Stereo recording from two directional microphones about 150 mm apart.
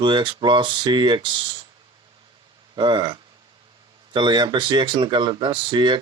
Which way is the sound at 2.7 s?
30° right (ahead or behind).